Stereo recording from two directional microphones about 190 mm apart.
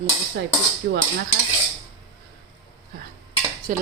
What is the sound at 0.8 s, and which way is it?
Dishes, 60° right (ahead or behind).